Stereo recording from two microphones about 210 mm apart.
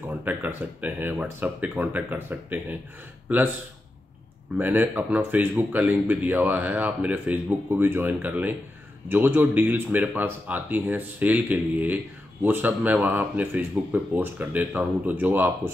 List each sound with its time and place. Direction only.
0.1 s speech: 10° right (ahead or behind)
4.6 s speech: 10° right (ahead or behind)